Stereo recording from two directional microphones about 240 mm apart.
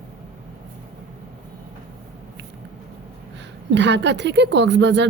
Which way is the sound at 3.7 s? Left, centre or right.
Right.